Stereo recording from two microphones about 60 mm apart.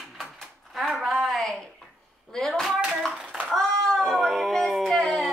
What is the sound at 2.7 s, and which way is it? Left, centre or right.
Hands, centre.